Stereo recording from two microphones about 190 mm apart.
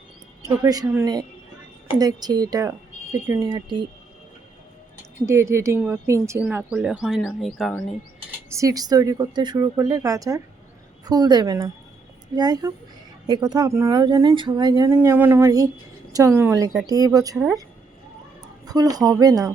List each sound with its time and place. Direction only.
0.4 s speech: 20° right (ahead or behind)
5.2 s speech: 15° right (ahead or behind)
8.4 s speech: 15° right (ahead or behind)
18.6 s speech: 20° right (ahead or behind)